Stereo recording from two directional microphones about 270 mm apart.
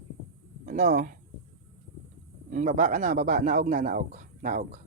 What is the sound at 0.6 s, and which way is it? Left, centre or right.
Speech, right.